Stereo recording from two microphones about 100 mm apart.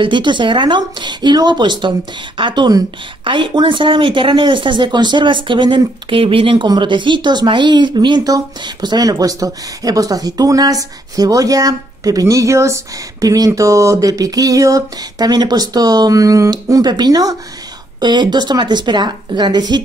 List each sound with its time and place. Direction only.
0.0 s speech: 50° right (ahead or behind); by 13.5 s 35° right (ahead or behind)
13.5 s a sound: 30° right (ahead or behind)
18.0 s speech: 45° right (ahead or behind)